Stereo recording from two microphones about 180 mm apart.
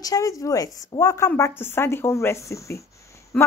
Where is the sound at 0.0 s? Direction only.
20° left (ahead or behind).